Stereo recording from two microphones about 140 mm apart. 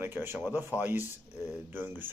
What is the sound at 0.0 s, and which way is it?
Speech, 15° right (ahead or behind).